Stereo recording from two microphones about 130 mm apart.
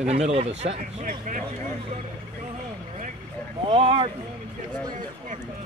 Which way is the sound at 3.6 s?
45° right (ahead or behind).